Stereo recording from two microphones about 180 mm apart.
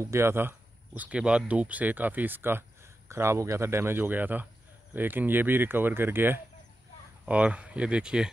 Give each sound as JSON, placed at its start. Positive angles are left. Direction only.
{"t": 0.0, "sound": "speech", "side_deg": -15}